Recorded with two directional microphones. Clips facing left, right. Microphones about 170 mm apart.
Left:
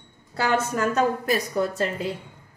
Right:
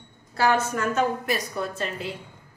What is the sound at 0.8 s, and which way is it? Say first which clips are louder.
Speech: left 2 dB; 40° left (ahead or behind).